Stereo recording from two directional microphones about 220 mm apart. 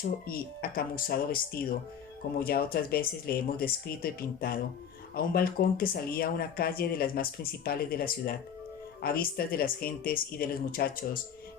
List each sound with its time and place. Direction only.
0.3 s speech: 40° left (ahead or behind)